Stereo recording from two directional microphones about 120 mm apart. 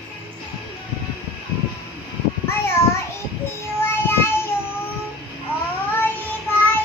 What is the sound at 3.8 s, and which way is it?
Child singing, 20° left (ahead or behind).